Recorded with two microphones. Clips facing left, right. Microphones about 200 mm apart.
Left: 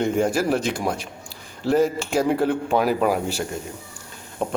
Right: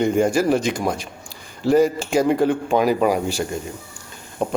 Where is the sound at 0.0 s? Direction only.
Centre (ahead or behind).